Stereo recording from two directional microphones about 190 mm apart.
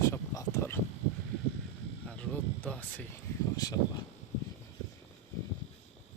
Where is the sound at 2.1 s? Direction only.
5° left (ahead or behind).